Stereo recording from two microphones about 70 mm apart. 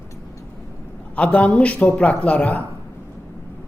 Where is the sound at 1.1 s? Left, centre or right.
Centre.